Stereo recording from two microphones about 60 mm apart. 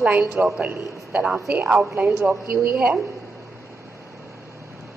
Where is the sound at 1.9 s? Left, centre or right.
Right.